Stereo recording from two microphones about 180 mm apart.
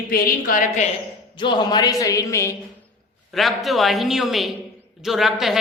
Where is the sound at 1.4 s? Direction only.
25° left (ahead or behind).